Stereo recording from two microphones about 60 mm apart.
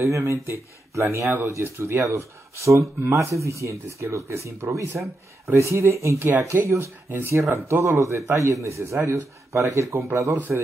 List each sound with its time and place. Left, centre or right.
0.0 s speech: right
2.0 s speech: right
10.5 s a man's voice: centre